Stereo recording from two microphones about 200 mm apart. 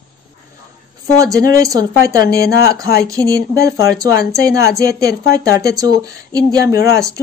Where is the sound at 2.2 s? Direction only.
50° left (ahead or behind).